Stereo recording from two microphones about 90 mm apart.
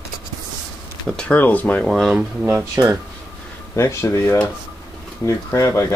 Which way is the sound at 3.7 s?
35° left (ahead or behind).